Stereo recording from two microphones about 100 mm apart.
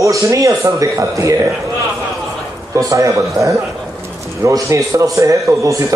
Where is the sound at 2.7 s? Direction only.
35° right (ahead or behind).